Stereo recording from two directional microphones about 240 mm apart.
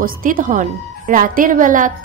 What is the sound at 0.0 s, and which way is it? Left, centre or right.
A woman's voice, right.